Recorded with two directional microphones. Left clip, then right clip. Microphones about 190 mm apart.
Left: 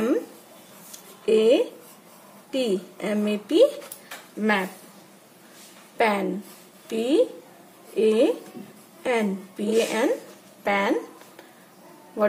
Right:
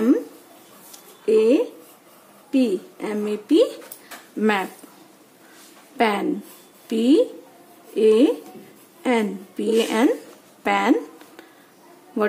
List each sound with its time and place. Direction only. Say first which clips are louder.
1.2 s a sound: right 2 dB; 35° right (ahead or behind)
2.5 s a woman's voice: right 3 dB; 35° right (ahead or behind)
4.4 s speech: right 2 dB; 50° right (ahead or behind)
5.9 s a woman's voice: right 2 dB; 45° right (ahead or behind)